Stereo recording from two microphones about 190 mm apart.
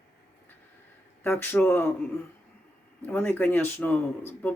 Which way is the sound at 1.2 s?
10° left (ahead or behind).